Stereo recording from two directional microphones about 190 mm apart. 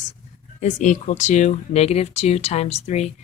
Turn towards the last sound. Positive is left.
turn(degrees=35)  # may be behind; listen again after turning